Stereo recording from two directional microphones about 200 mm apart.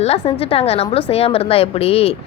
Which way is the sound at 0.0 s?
30° left (ahead or behind).